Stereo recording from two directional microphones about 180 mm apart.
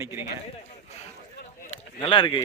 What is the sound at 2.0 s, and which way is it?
Speech, 25° left (ahead or behind).